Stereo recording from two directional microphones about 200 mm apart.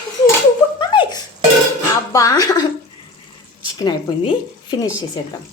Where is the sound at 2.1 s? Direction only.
15° left (ahead or behind).